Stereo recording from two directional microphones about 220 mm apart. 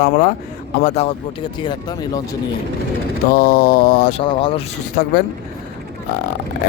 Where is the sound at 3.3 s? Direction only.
45° left (ahead or behind).